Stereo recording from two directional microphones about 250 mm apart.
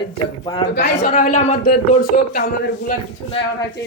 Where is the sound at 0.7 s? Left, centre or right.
Left.